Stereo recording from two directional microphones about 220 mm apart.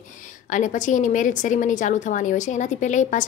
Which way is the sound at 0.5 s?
35° left (ahead or behind).